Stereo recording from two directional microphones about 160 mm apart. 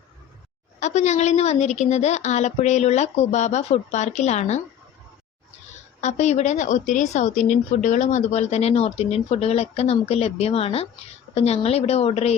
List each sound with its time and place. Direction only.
0.8 s a woman's voice: 45° left (ahead or behind)
6.0 s speech: 45° left (ahead or behind)